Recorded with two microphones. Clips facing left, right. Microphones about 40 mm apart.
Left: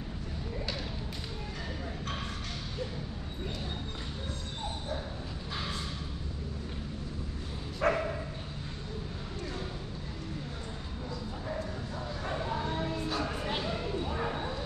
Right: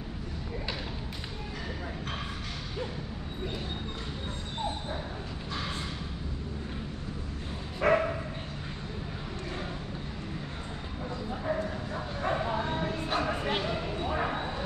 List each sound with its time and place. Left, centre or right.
7.8 s dog: centre
12.2 s bow-wow: right
13.6 s a sound: right